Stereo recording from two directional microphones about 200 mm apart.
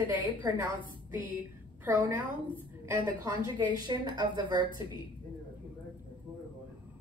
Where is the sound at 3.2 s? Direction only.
20° right (ahead or behind).